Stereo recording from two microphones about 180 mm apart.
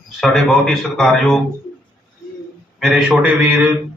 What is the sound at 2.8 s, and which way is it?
Speech, 5° right (ahead or behind).